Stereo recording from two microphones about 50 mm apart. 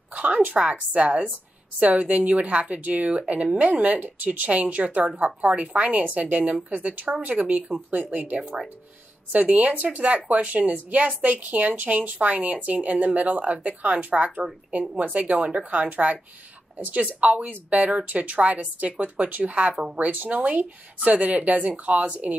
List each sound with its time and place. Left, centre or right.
0.1 s a woman's voice: right